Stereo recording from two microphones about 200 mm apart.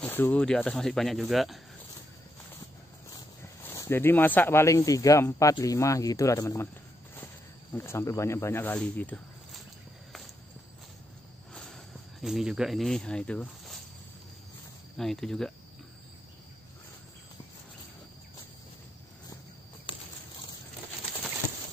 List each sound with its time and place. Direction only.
0.0 s speech: 10° left (ahead or behind)
3.6 s speech: 15° left (ahead or behind)
7.7 s speech: 10° left (ahead or behind)
11.5 s a sound: centre (ahead or behind)
15.0 s speech: centre (ahead or behind)